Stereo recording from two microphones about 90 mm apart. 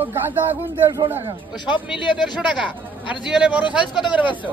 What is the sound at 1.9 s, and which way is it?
Speech, 60° left (ahead or behind).